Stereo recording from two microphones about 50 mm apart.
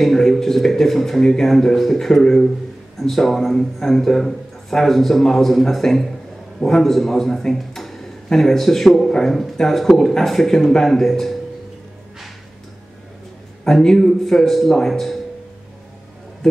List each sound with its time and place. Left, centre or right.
0.0 s a man's voice: centre
13.7 s a man's voice: centre